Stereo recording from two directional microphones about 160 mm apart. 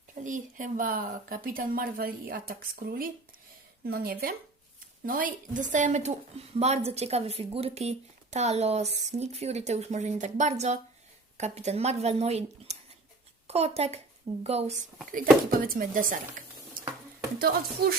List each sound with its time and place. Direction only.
0.1 s a woman's voice: 50° right (ahead or behind)
15.1 s speech: 60° right (ahead or behind)
17.8 s speech: 75° right (ahead or behind)